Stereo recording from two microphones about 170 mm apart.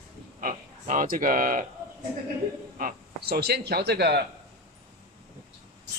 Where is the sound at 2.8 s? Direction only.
65° right (ahead or behind).